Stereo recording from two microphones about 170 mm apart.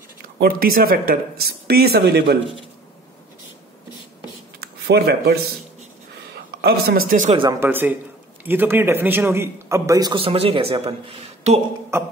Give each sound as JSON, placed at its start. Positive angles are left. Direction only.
{"t": 0.4, "sound": "speech", "side_deg": -60}
{"t": 4.6, "sound": "a sound", "side_deg": -70}
{"t": 6.3, "sound": "a woman's voice", "side_deg": -65}
{"t": 7.6, "sound": "a man's voice", "side_deg": -10}